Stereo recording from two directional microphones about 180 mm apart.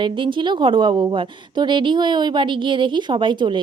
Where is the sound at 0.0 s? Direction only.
25° right (ahead or behind).